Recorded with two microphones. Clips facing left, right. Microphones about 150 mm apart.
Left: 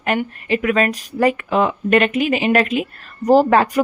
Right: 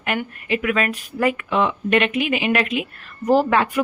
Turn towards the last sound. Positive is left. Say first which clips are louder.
# left 4 dB
turn(degrees=40)  # may be behind; listen again after turning